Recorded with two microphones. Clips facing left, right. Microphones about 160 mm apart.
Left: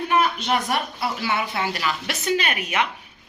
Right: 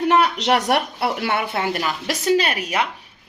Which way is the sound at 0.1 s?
80° right.